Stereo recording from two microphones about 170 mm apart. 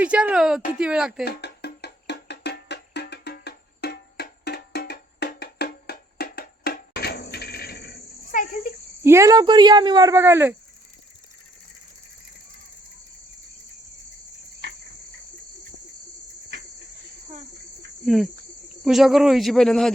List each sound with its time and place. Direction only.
0.0 s a man's voice: 5° right (ahead or behind)
1.2 s music: 75° left (ahead or behind); by 8.4 s 60° left (ahead or behind)
9.0 s speech: 15° right (ahead or behind)
18.0 s cricket: centre (ahead or behind)
18.9 s a man's voice: centre (ahead or behind)